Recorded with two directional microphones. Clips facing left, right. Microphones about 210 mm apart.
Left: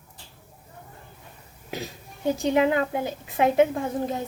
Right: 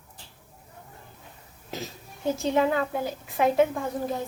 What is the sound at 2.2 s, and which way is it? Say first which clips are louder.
A woman's voice: left 2 dB; 15° left (ahead or behind).